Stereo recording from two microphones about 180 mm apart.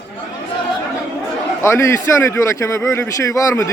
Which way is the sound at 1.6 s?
15° left (ahead or behind).